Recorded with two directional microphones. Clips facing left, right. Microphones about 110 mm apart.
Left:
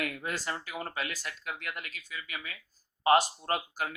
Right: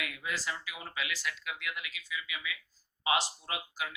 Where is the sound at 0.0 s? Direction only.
45° left (ahead or behind).